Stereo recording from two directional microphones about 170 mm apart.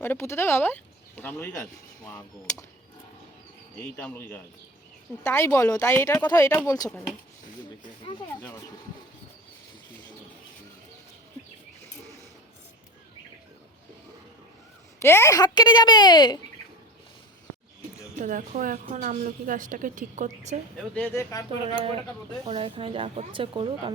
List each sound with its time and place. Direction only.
0.0 s speech: 15° left (ahead or behind)
3.9 s a woman's voice: 10° left (ahead or behind)
8.3 s speech: 15° left (ahead or behind)
15.0 s a woman's voice: 15° left (ahead or behind)
18.2 s a woman's voice: 50° right (ahead or behind)
20.9 s speech: 10° left (ahead or behind)
22.4 s speech: 35° right (ahead or behind)